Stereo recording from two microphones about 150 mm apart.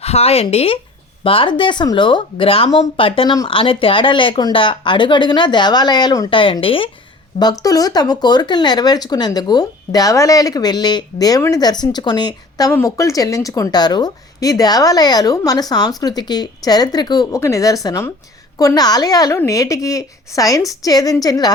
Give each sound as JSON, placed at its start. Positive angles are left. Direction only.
{"t": 0.0, "sound": "speech", "side_deg": 45}
{"t": 7.3, "sound": "speech", "side_deg": 25}